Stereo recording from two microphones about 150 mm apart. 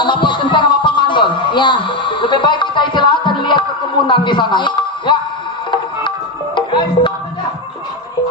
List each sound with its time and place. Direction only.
0.0 s music: 30° left (ahead or behind)